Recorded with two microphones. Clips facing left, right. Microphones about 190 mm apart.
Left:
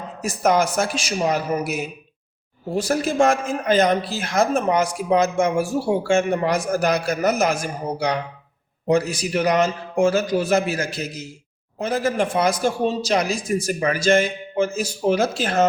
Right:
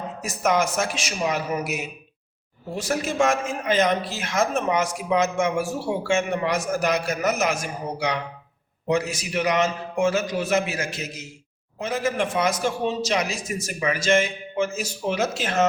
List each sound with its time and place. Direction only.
0.2 s speech: 35° left (ahead or behind)